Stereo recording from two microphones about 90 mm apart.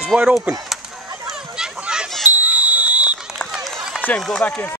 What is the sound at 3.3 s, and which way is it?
Run, centre (ahead or behind).